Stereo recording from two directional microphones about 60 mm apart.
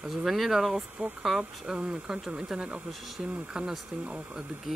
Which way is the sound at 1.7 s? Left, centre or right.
Centre.